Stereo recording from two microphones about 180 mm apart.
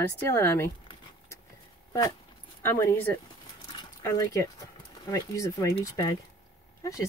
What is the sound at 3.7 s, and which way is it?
Dog, 20° left (ahead or behind).